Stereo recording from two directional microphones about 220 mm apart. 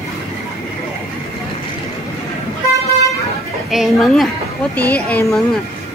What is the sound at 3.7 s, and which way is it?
A woman's voice, centre (ahead or behind).